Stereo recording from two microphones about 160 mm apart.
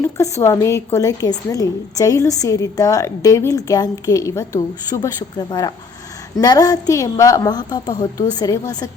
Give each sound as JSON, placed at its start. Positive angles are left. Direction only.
{"t": 0.0, "sound": "a woman's voice", "side_deg": 15}